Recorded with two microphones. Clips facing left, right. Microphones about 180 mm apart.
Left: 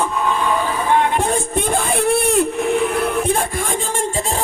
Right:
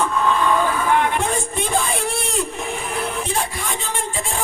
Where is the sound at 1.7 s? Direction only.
55° left (ahead or behind).